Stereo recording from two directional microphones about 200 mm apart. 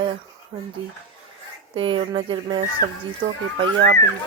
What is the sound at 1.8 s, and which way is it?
Speech, 25° right (ahead or behind).